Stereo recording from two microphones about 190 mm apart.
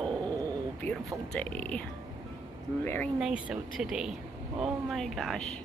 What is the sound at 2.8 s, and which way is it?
Speech, 10° left (ahead or behind).